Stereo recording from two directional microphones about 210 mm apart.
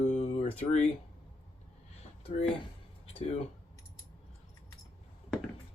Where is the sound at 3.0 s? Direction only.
30° left (ahead or behind).